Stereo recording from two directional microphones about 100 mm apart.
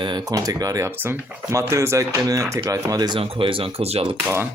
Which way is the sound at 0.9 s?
20° right (ahead or behind).